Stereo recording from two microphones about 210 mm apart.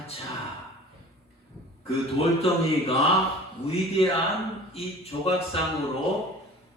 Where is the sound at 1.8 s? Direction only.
30° left (ahead or behind).